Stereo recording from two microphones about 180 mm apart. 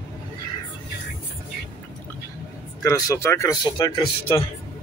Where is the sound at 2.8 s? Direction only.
15° left (ahead or behind).